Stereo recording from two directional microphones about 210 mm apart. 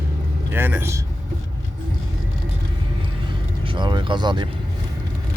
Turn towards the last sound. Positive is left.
turn(degrees=-20)  # may be behind; listen again after turning